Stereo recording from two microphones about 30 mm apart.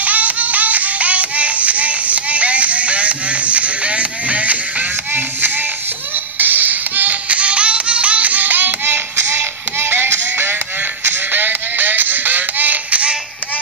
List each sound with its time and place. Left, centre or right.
0.0 s music: right
6.3 s a sound: right
7.2 s music: right
11.3 s music: right